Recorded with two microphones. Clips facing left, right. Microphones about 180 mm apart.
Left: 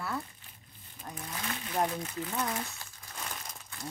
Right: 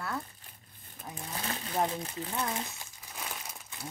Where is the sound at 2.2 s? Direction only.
25° right (ahead or behind).